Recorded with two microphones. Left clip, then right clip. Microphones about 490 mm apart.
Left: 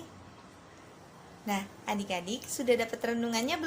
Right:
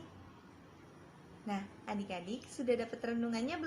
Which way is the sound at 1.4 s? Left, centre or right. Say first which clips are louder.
Left 8 dB; right.